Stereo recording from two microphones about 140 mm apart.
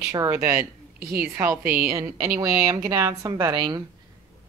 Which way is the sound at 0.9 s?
90° right.